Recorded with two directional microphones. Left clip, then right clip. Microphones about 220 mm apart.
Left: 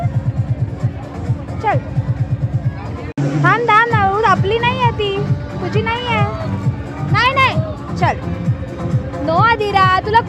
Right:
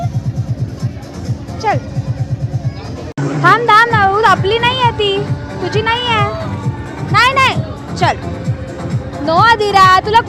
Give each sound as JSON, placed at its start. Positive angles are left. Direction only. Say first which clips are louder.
{"t": 1.6, "sound": "speech", "louder": "right 2 dB", "side_deg": 0}
{"t": 3.4, "sound": "a sound", "louder": "right 4 dB", "side_deg": 0}
{"t": 5.7, "sound": "cat", "louder": "right 4 dB", "side_deg": 0}
{"t": 7.1, "sound": "music", "louder": "right 3 dB", "side_deg": 0}
{"t": 9.2, "sound": "speech", "louder": "right 4 dB", "side_deg": 0}